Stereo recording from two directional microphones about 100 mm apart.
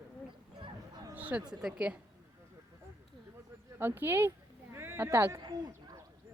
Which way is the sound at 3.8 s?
25° right (ahead or behind).